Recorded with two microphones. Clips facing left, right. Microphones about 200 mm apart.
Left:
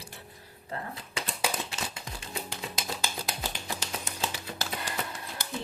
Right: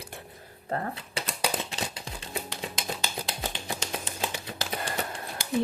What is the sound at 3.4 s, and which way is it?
Finger snapping, 15° right (ahead or behind).